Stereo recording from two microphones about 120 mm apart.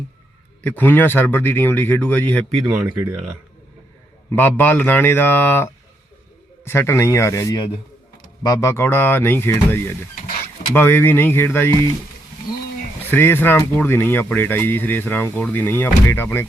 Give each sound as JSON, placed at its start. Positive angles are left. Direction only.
{"t": 0.6, "sound": "speech", "side_deg": 15}
{"t": 2.7, "sound": "speech", "side_deg": -10}
{"t": 4.3, "sound": "speech", "side_deg": 15}
{"t": 6.7, "sound": "speech", "side_deg": 20}
{"t": 13.1, "sound": "speech", "side_deg": 20}